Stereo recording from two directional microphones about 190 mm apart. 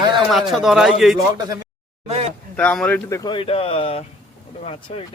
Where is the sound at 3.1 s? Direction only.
20° left (ahead or behind).